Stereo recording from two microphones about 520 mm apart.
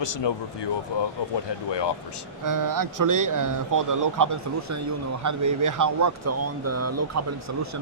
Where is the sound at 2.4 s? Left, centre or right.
Right.